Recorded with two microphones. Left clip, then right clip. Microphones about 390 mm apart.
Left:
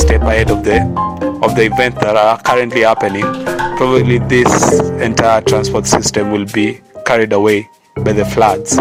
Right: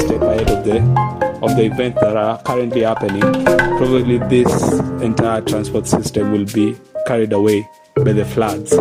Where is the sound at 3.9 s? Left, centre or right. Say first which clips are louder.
Left 3 dB; centre.